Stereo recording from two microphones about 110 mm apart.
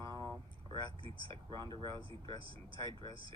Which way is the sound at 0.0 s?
40° right (ahead or behind).